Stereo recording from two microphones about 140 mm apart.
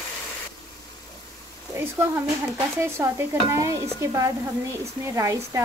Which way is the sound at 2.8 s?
20° right (ahead or behind).